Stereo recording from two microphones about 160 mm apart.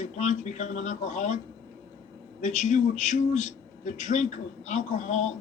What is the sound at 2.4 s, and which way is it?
Speech, 50° left (ahead or behind).